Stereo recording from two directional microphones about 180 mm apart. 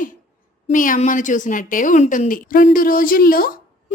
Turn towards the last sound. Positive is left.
turn(degrees=55)  # may be behind; listen again after turning